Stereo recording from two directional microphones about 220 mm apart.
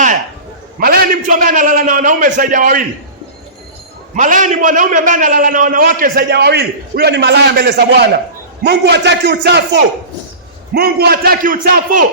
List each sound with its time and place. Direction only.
0.8 s a man's voice: 40° right (ahead or behind)
4.1 s a man's voice: 35° right (ahead or behind)
10.8 s a man's voice: 45° right (ahead or behind)